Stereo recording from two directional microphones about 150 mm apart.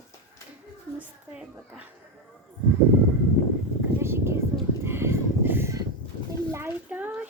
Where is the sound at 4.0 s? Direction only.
15° right (ahead or behind).